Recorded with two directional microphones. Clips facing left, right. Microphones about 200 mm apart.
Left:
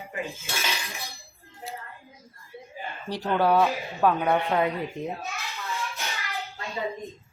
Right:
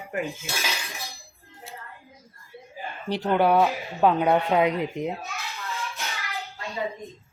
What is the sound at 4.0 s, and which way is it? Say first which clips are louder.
A child's voice: right 3 dB; 20° right (ahead or behind).